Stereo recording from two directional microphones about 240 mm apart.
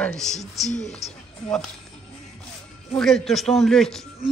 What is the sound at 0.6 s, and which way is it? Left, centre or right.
Speech, left.